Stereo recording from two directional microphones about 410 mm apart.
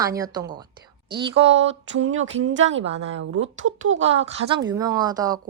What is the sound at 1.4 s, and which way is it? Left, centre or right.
Speech, right.